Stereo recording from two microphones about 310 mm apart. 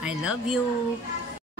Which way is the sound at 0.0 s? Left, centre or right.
Centre.